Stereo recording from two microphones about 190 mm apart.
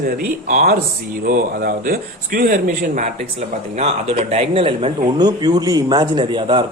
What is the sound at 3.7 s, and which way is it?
Speech, 35° right (ahead or behind).